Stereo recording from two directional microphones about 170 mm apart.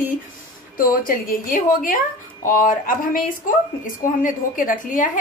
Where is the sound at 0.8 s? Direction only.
55° left (ahead or behind).